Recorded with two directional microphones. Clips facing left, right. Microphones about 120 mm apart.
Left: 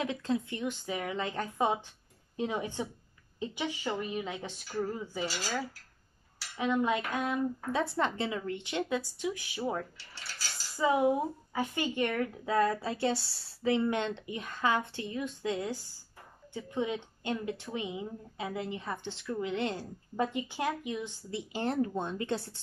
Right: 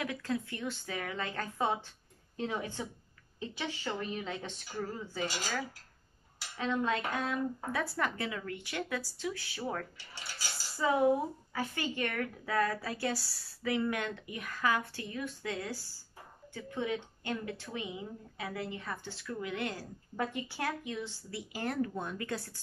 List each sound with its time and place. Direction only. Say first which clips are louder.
0.0 s a woman's voice: left 3 dB; 25° left (ahead or behind)
6.5 s dishes: left 3 dB; 15° left (ahead or behind)
7.2 s speech: left 3 dB; 20° left (ahead or behind)
9.9 s cutlery: right 1 dB; 15° right (ahead or behind)
10.8 s speech: left 1 dB; 15° left (ahead or behind)